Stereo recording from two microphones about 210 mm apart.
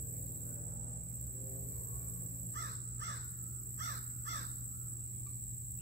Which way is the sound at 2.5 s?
55° right (ahead or behind).